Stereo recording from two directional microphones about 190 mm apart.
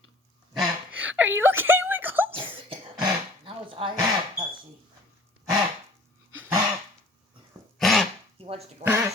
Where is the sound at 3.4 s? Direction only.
30° right (ahead or behind).